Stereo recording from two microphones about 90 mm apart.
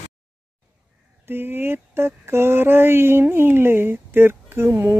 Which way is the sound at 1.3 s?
25° right (ahead or behind).